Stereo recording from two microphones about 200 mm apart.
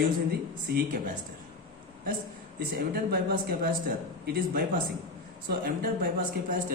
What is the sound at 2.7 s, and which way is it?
A man's voice, 50° right (ahead or behind).